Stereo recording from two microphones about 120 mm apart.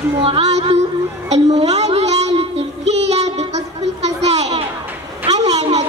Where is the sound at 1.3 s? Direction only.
65° right (ahead or behind).